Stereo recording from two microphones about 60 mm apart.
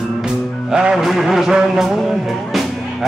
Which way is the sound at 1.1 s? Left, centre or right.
Centre.